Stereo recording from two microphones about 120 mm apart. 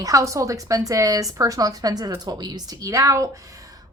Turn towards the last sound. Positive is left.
turn(degrees=-30)  # may be behind; listen again after turning